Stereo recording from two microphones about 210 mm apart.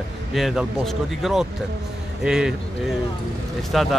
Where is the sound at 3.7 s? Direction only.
Centre (ahead or behind).